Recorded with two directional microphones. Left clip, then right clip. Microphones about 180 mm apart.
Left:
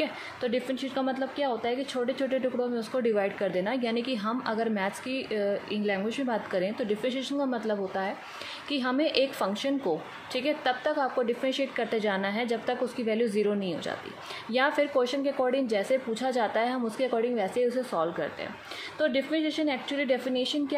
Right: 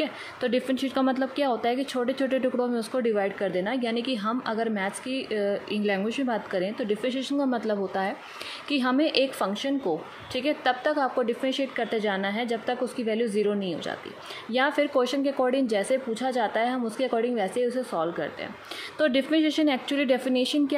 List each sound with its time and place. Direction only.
0.0 s a woman's voice: 25° right (ahead or behind)
3.0 s a woman's voice: 10° right (ahead or behind)
18.9 s a woman's voice: 25° right (ahead or behind)